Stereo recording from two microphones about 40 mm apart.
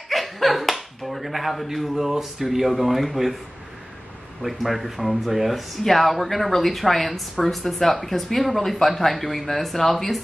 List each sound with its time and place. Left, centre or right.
0.1 s speech: centre
4.4 s speech: centre